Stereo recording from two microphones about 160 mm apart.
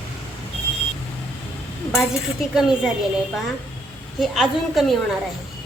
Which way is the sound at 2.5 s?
5° right (ahead or behind).